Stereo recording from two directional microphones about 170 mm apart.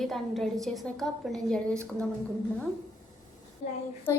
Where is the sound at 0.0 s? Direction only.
Centre (ahead or behind).